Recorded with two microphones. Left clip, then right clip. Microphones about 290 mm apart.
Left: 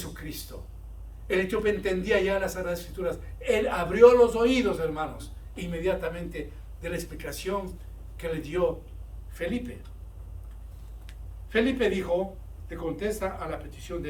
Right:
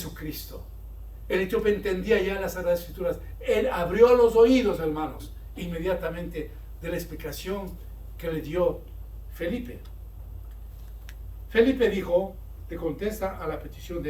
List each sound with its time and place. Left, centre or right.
1.3 s a man's voice: centre
11.5 s a man's voice: centre